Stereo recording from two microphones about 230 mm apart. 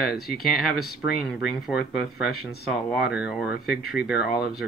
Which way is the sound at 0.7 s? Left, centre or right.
Left.